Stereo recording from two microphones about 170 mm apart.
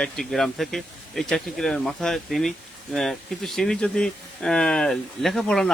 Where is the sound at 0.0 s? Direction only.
Centre (ahead or behind).